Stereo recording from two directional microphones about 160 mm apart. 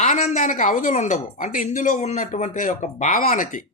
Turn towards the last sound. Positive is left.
turn(degrees=55)  # may be behind; listen again after turning